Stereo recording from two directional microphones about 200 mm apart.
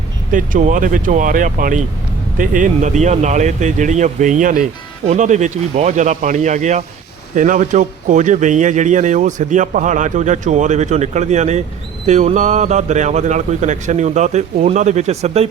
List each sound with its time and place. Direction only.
0.3 s a man's voice: 40° right (ahead or behind)